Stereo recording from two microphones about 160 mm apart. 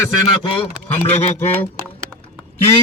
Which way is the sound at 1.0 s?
40° left (ahead or behind).